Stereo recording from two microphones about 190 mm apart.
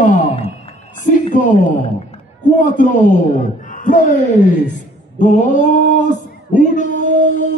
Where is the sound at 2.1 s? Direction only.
40° left (ahead or behind).